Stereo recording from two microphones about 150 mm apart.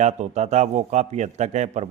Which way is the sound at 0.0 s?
50° right (ahead or behind).